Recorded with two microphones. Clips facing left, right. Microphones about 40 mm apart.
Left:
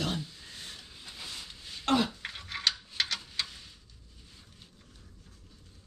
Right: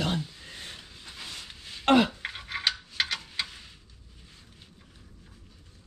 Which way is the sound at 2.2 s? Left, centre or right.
Centre.